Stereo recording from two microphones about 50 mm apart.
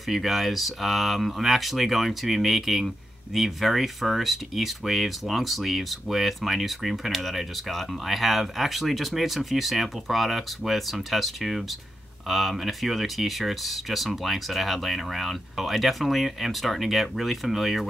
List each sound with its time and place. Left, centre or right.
0.1 s speech: centre